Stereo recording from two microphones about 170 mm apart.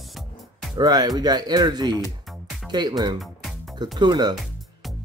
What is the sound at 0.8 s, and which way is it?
Speech, 25° right (ahead or behind).